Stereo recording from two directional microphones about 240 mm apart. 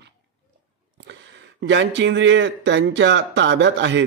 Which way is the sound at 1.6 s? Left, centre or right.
Right.